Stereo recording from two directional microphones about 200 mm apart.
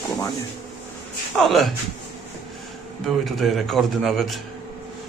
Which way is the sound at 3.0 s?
Centre (ahead or behind).